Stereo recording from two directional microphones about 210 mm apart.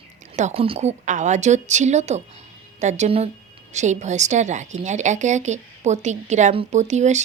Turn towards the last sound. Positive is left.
turn(degrees=-35)  # may be behind; listen again after turning